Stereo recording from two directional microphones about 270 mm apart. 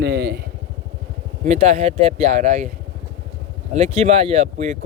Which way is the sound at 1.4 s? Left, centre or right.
Right.